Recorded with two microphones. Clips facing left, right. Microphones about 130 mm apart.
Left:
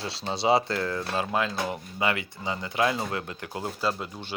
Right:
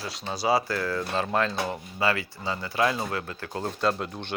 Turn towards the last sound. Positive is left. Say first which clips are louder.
# right 3 dB
turn(degrees=0)  # may be behind; listen again after turning